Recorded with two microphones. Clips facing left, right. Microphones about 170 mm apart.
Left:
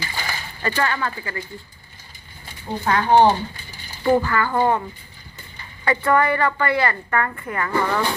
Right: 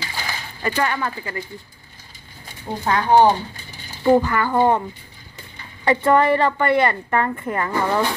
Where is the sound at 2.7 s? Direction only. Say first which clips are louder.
Even; 10° right (ahead or behind).